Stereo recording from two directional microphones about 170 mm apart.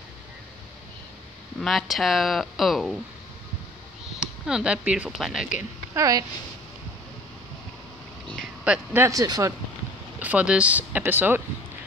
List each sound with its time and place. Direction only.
1.6 s speech: centre (ahead or behind)
4.2 s speech: 5° right (ahead or behind)
5.9 s speech: 20° right (ahead or behind)
8.6 s speech: 10° right (ahead or behind)
10.1 s speech: 10° right (ahead or behind)